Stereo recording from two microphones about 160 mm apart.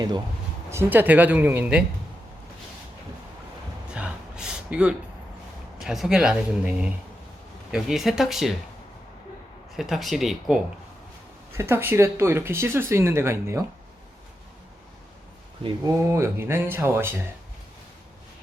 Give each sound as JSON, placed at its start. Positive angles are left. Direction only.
{"t": 0.7, "sound": "speech", "side_deg": -15}
{"t": 3.9, "sound": "gasp", "side_deg": -5}
{"t": 5.8, "sound": "speech", "side_deg": 0}
{"t": 9.7, "sound": "speech", "side_deg": 0}
{"t": 11.5, "sound": "speech", "side_deg": -15}
{"t": 15.9, "sound": "speech", "side_deg": -20}